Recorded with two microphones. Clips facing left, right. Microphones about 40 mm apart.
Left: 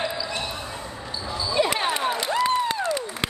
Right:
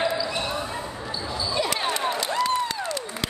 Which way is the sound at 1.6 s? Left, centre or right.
Left.